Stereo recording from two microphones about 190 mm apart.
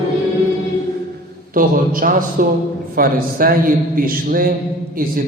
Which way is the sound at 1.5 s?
45° right (ahead or behind).